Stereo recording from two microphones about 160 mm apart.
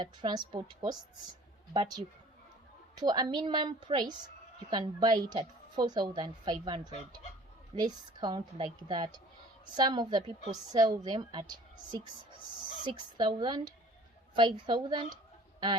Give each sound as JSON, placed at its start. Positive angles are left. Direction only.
{"t": 0.0, "sound": "a woman's voice", "side_deg": -30}
{"t": 2.9, "sound": "a woman's voice", "side_deg": -25}